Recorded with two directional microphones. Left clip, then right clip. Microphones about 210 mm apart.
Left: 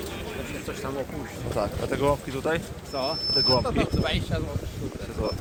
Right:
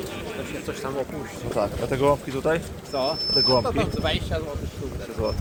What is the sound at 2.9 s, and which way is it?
Speech, 35° right (ahead or behind).